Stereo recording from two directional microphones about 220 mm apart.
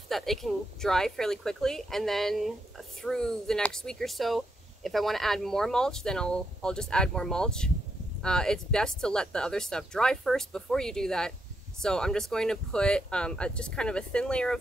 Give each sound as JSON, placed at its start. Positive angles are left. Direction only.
{"t": 0.1, "sound": "speech", "side_deg": 0}